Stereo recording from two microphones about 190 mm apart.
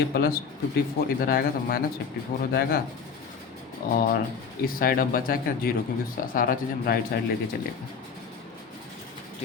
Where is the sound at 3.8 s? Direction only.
50° left (ahead or behind).